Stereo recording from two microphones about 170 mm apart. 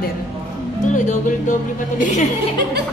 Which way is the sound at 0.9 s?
50° left (ahead or behind).